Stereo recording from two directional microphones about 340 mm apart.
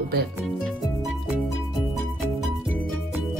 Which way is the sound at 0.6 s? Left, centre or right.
Centre.